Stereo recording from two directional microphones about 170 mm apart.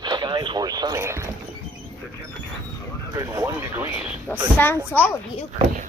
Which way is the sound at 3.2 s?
20° right (ahead or behind).